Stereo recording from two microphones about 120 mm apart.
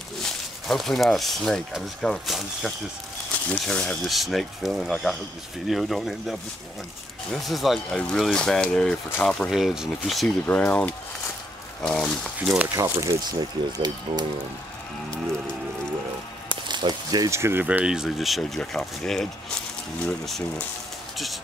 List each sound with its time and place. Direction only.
0.2 s speech: 5° left (ahead or behind)
7.4 s speech: centre (ahead or behind)
10.4 s speech: 15° left (ahead or behind)
12.4 s speech: 10° right (ahead or behind)
12.7 s speech: 30° right (ahead or behind)
16.4 s a sound: 40° right (ahead or behind)
17.4 s speech: 20° right (ahead or behind); by 20.6 s 5° left (ahead or behind)